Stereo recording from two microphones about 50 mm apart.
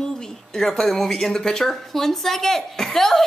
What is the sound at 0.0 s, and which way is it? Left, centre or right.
Speech, centre.